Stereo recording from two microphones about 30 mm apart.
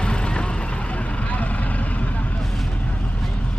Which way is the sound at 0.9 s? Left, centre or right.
Left.